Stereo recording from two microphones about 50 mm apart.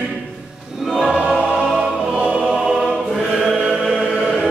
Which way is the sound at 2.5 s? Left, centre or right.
Centre.